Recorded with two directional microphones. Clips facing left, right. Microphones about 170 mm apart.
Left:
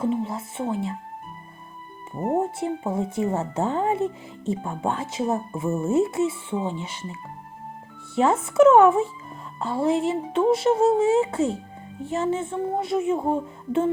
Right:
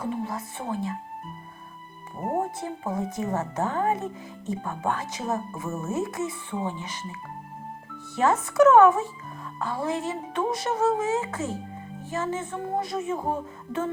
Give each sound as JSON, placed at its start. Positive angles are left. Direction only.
{"t": 0.0, "sound": "speech", "side_deg": 25}
{"t": 2.3, "sound": "speech", "side_deg": 25}